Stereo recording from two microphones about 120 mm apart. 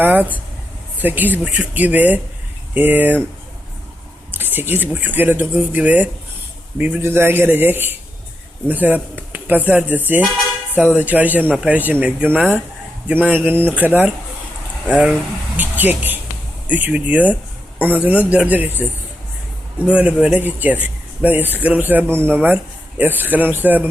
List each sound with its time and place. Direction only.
0.0 s speech: 15° right (ahead or behind)
4.3 s speech: 15° right (ahead or behind)
15.5 s speech: 15° right (ahead or behind)